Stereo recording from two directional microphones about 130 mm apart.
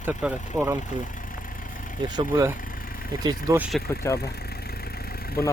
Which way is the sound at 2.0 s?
35° right (ahead or behind).